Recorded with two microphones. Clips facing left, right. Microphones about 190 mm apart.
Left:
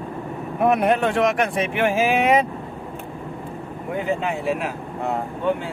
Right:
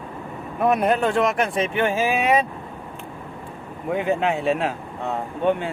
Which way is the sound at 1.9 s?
15° left (ahead or behind).